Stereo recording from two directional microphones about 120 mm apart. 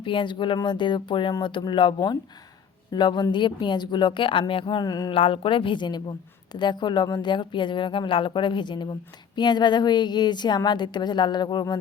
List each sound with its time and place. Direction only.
0.0 s a woman's voice: 45° left (ahead or behind)
5.1 s a woman's voice: 50° left (ahead or behind)